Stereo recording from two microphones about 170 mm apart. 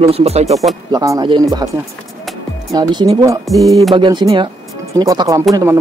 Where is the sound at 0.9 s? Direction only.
20° right (ahead or behind).